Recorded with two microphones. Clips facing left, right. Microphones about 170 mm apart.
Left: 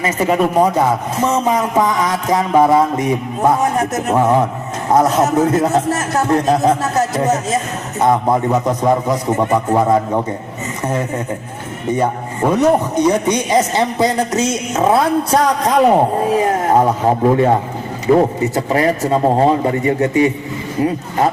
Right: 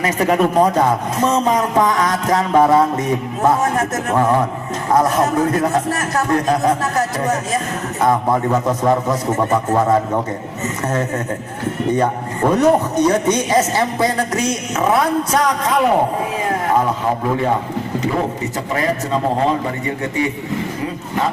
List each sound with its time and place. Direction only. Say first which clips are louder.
0.0 s a man's voice: even; 5° left (ahead or behind)
11.9 s a man's voice: left 2 dB; 10° left (ahead or behind); by 20.3 s 35° left (ahead or behind)